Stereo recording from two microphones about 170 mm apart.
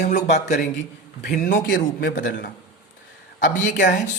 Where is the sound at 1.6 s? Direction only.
90° left.